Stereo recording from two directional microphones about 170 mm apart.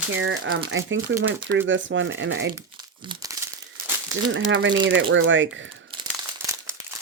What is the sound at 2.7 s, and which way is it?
Crumpling, 25° right (ahead or behind).